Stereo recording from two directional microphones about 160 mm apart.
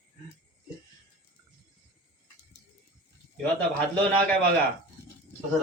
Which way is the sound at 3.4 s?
10° left (ahead or behind).